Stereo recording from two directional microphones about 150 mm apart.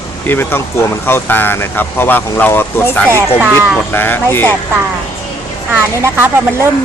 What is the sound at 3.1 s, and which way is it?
Speech, 15° right (ahead or behind).